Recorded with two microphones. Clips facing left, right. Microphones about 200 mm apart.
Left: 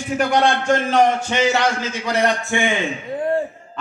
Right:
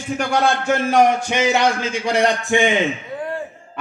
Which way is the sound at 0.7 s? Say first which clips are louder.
Right 1 dB; 10° right (ahead or behind).